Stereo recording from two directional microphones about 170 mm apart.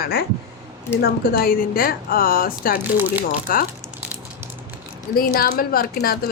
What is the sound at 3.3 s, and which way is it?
Speech, 55° left (ahead or behind).